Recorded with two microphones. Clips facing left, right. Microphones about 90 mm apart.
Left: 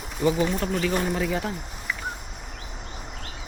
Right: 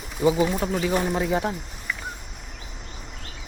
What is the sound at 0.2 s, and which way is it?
Speech, 10° right (ahead or behind).